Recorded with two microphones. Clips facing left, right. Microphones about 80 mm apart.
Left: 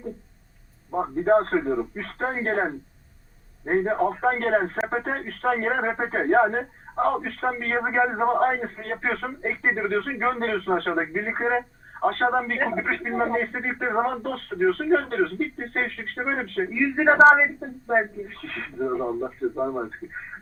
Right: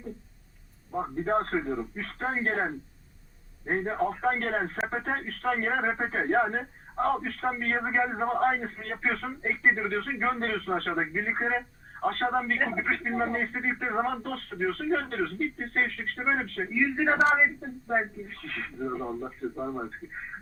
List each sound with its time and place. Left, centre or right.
0.9 s speech: left